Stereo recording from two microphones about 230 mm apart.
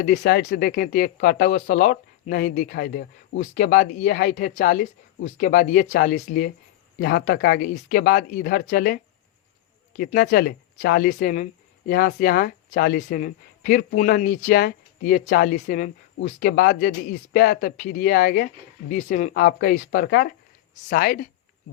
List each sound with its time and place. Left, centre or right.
0.0 s speech: left
10.0 s speech: left